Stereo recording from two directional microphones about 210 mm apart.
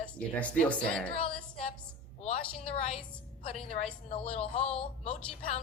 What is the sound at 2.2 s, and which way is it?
A woman's voice, 30° left (ahead or behind).